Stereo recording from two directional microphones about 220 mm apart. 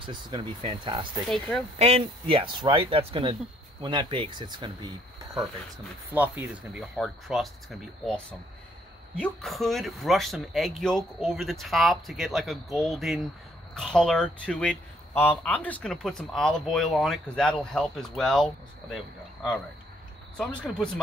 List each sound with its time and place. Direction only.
0.0 s a man's voice: 20° right (ahead or behind); by 18.9 s centre (ahead or behind)
20.3 s a man's voice: 5° left (ahead or behind)